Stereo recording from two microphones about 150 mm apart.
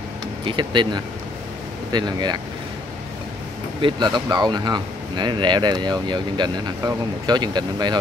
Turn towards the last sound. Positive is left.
turn(degrees=-30)  # may be behind; listen again after turning